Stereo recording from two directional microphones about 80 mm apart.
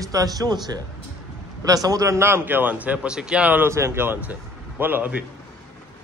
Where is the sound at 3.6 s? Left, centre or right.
Right.